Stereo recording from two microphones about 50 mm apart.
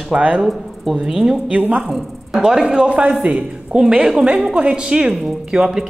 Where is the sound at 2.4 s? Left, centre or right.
Centre.